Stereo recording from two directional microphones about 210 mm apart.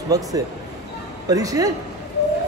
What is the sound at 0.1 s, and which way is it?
Speech, 15° right (ahead or behind).